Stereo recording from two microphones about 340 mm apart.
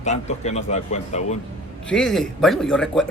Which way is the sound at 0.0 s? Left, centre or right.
Centre.